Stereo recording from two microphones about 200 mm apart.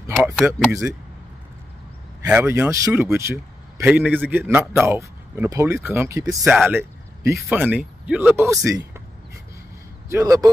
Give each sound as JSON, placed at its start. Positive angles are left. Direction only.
{"t": 0.2, "sound": "speech", "side_deg": -10}
{"t": 2.2, "sound": "speech", "side_deg": -10}
{"t": 10.0, "sound": "a man's voice", "side_deg": -15}